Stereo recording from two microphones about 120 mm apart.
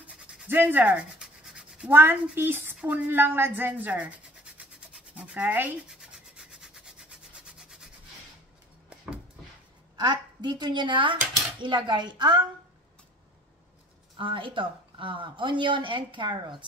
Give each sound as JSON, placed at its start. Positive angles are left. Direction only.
{"t": 0.0, "sound": "a sound", "side_deg": -10}
{"t": 1.9, "sound": "speech", "side_deg": -20}
{"t": 5.9, "sound": "rub", "side_deg": -5}
{"t": 9.9, "sound": "speech", "side_deg": -35}
{"t": 14.1, "sound": "speech", "side_deg": -45}